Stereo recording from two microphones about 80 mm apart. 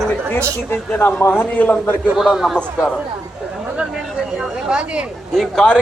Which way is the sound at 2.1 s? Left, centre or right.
Centre.